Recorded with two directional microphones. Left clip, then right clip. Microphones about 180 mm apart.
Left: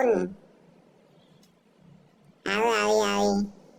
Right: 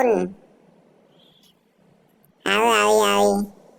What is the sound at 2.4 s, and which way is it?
Speech, 30° right (ahead or behind).